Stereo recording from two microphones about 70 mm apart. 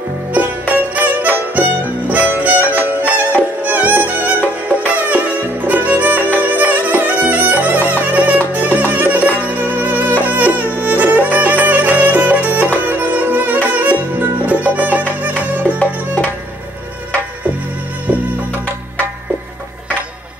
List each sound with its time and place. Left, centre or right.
0.3 s music: right